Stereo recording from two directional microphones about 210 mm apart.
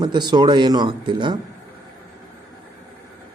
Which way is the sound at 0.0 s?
20° right (ahead or behind).